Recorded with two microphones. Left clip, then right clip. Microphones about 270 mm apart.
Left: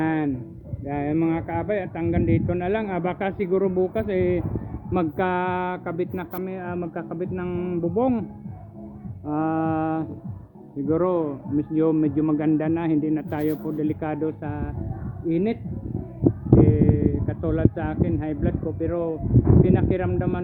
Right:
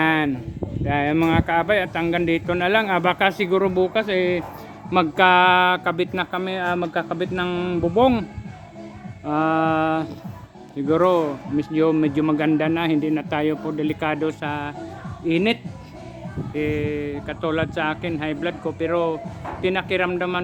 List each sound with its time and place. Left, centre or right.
0.0 s a sound: centre
0.9 s speech: centre
9.2 s speech: centre
16.6 s speech: centre